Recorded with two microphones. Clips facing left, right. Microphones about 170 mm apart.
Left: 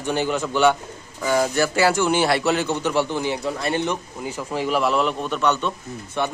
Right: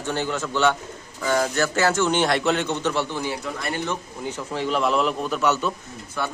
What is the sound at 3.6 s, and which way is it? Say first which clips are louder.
Speech: left 4 dB; 25° left (ahead or behind).